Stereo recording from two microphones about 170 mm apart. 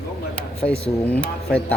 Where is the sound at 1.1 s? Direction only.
10° left (ahead or behind).